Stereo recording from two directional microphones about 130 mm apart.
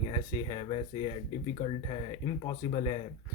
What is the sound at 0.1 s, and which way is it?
Speech, 40° left (ahead or behind).